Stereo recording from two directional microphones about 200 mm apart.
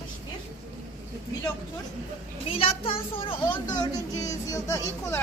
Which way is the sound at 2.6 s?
30° left (ahead or behind).